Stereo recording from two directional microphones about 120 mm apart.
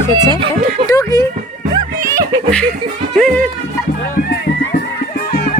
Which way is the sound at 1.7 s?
25° right (ahead or behind).